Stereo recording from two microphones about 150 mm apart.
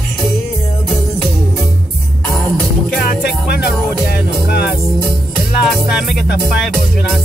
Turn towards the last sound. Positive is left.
turn(degrees=0)  # may be behind; listen again after turning